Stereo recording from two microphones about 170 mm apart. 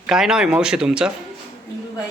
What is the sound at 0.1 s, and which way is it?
Speech, 5° right (ahead or behind).